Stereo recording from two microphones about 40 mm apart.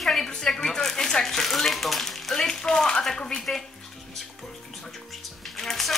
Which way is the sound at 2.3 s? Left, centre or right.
Centre.